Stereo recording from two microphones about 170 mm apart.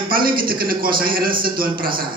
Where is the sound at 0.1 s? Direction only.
60° right (ahead or behind).